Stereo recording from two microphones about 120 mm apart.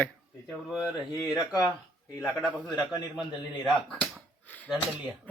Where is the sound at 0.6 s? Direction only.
5° right (ahead or behind).